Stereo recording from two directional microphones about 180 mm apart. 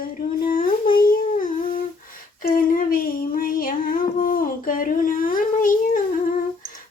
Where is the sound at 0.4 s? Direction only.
50° left (ahead or behind).